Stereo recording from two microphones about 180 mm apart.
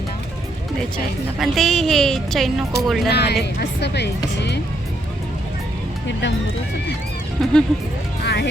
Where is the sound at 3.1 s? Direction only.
65° left (ahead or behind).